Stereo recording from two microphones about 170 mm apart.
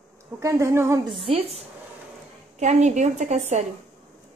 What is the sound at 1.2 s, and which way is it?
A woman's voice, 35° right (ahead or behind).